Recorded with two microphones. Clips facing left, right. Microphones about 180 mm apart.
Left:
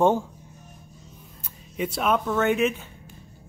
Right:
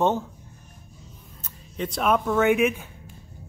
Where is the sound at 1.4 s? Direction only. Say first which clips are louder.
Left 2 dB; 5° left (ahead or behind).